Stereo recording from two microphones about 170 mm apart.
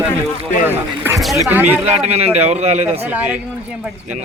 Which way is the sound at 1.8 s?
40° right (ahead or behind).